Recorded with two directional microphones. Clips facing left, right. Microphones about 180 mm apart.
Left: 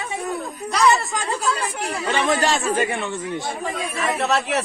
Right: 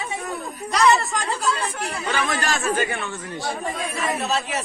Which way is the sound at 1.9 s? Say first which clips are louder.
Left 5 dB; 30° left (ahead or behind).